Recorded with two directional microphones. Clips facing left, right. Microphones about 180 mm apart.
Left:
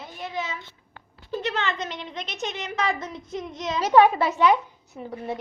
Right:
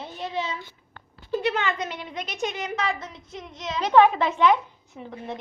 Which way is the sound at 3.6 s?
5° left (ahead or behind).